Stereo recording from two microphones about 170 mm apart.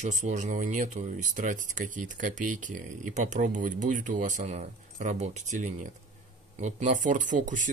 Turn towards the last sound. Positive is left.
turn(degrees=-50)  # may be behind; listen again after turning